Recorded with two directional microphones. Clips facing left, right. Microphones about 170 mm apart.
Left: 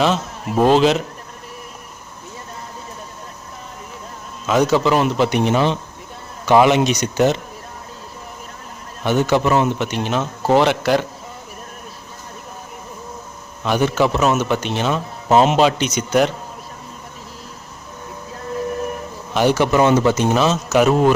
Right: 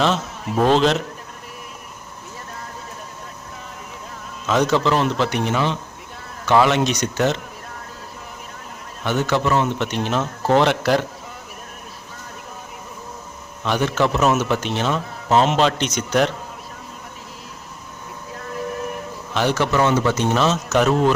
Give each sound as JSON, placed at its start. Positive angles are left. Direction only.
{"t": 0.0, "sound": "a man's voice", "side_deg": 0}
{"t": 4.4, "sound": "a man's voice", "side_deg": 5}
{"t": 9.0, "sound": "a man's voice", "side_deg": 15}
{"t": 13.7, "sound": "a man's voice", "side_deg": 10}
{"t": 19.3, "sound": "a man's voice", "side_deg": 10}
{"t": 20.1, "sound": "a man's voice", "side_deg": 5}